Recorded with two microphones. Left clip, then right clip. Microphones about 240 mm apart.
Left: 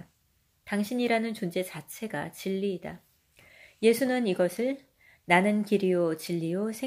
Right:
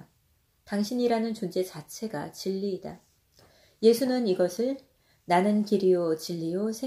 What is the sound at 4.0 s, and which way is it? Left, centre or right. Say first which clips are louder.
Speech: right 1 dB; left.